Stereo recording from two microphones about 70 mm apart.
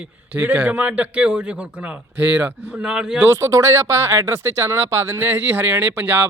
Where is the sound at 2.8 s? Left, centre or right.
Centre.